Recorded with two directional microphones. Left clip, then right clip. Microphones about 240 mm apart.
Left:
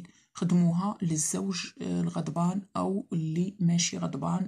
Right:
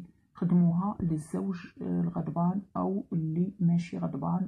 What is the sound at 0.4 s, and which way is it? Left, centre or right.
Speech, left.